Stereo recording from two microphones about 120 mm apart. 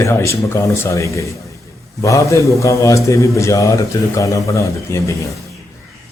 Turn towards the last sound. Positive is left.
turn(degrees=25)  # may be behind; listen again after turning